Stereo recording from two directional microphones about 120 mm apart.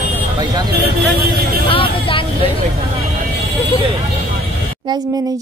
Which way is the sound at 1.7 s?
45° left (ahead or behind).